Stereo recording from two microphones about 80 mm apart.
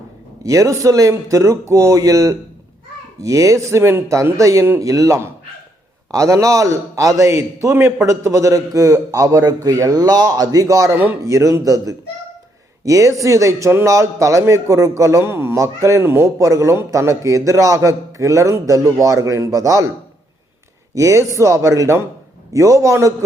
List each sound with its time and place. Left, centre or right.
0.4 s a man's voice: right
10.9 s speech: right
11.2 s a man's voice: right
20.9 s a man's voice: right